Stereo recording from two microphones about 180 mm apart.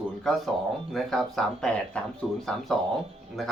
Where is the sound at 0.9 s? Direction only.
Centre (ahead or behind).